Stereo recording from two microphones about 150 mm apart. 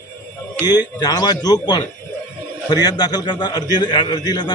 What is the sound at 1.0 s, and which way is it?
A man's voice, 25° left (ahead or behind).